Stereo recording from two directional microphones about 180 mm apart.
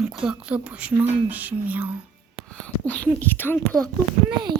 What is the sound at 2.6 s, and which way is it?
Speech, 5° left (ahead or behind).